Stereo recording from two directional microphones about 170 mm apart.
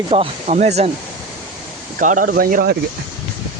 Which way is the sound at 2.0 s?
50° right (ahead or behind).